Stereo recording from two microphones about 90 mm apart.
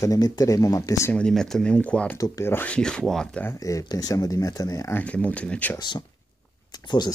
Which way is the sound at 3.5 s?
40° left (ahead or behind).